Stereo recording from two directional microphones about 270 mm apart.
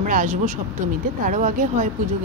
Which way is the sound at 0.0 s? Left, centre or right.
Right.